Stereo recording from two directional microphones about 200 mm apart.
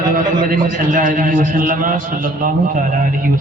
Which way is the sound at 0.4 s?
40° right (ahead or behind).